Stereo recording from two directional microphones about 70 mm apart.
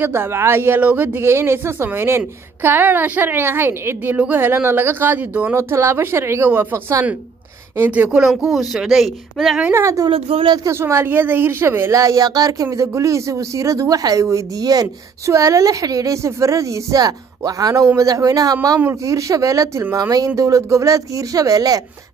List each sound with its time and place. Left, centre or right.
0.0 s a woman's voice: right
5.5 s a woman's voice: right; by 8.3 s centre
8.5 s speech: centre
9.7 s speech: right
9.9 s speech: right
10.7 s speech: right
11.9 s speech: right
12.7 s speech: right
19.0 s speech: right